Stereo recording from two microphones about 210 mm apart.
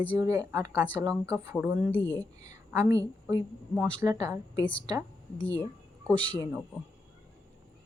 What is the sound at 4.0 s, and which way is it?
Speech, 15° right (ahead or behind).